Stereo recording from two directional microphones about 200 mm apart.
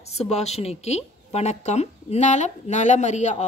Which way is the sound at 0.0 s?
30° left (ahead or behind).